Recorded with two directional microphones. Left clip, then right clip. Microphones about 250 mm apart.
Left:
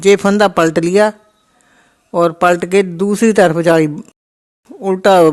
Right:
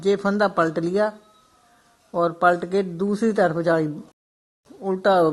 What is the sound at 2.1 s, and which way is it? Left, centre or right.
Speech, left.